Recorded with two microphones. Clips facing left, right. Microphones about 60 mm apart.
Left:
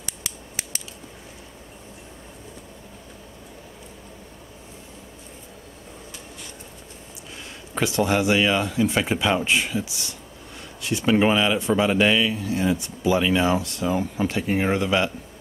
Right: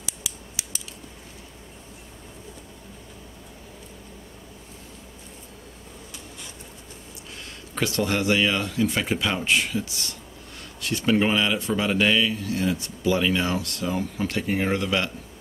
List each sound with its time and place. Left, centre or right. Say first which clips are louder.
0.0 s scissors: left 1 dB; left
7.7 s speech: left 3 dB; centre